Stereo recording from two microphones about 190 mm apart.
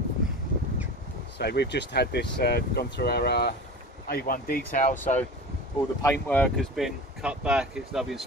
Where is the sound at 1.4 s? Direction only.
60° left (ahead or behind); by 4.9 s 45° left (ahead or behind).